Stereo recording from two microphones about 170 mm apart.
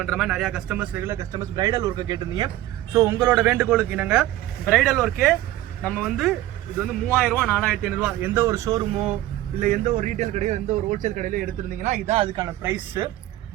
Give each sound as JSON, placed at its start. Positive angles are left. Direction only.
{"t": 0.0, "sound": "speech", "side_deg": 0}
{"t": 2.9, "sound": "speech", "side_deg": -15}
{"t": 9.6, "sound": "a man's voice", "side_deg": -45}
{"t": 12.6, "sound": "speech", "side_deg": -10}